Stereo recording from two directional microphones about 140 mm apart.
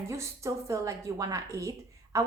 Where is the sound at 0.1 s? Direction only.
20° right (ahead or behind).